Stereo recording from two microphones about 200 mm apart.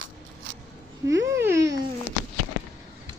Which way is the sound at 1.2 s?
15° right (ahead or behind).